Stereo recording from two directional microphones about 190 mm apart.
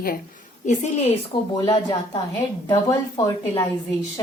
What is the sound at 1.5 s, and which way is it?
A woman's voice, 25° left (ahead or behind).